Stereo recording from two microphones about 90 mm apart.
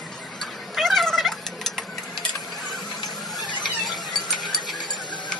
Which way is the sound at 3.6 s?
Centre (ahead or behind).